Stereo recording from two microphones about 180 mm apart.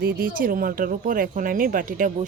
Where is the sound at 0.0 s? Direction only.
50° right (ahead or behind).